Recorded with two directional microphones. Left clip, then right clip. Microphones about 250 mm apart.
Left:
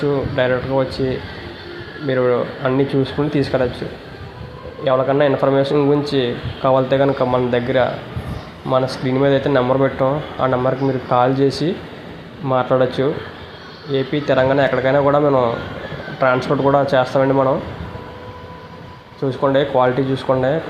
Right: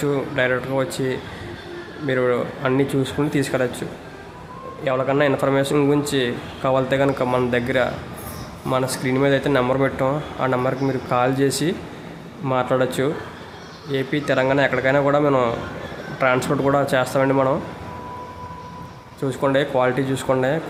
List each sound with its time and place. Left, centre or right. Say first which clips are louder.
0.0 s a man's voice: left 3 dB; centre
19.2 s a man's voice: left 3 dB; centre